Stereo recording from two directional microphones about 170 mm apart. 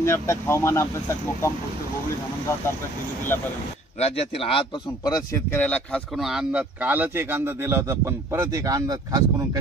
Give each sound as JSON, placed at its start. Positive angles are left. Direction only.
{"t": 0.0, "sound": "speech", "side_deg": 15}
{"t": 4.0, "sound": "speech", "side_deg": 35}
{"t": 5.6, "sound": "speech", "side_deg": 5}